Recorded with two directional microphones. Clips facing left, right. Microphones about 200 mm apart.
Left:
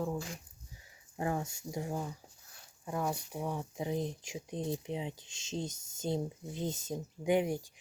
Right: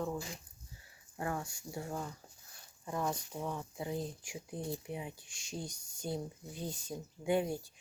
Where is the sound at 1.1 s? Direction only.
20° left (ahead or behind).